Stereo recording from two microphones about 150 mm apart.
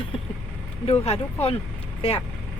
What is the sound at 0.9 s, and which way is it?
Speech, 45° left (ahead or behind).